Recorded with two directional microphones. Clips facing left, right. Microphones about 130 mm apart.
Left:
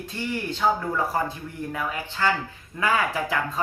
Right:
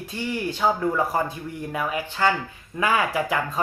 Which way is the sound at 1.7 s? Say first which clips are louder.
Right 4 dB; 15° right (ahead or behind).